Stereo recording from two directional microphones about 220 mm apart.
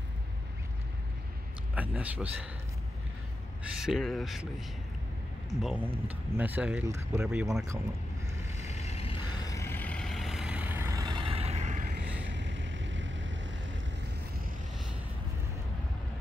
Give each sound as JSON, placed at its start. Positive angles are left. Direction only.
{"t": 1.8, "sound": "speech", "side_deg": -5}
{"t": 3.7, "sound": "speech", "side_deg": 0}
{"t": 5.6, "sound": "speech", "side_deg": -5}
{"t": 8.5, "sound": "vehicle", "side_deg": 30}
{"t": 12.3, "sound": "vehicle", "side_deg": -55}